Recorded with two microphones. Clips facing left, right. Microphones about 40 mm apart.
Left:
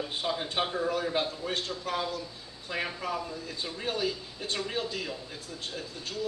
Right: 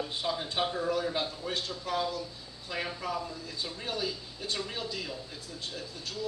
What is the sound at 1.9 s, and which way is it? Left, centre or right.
Speech, left.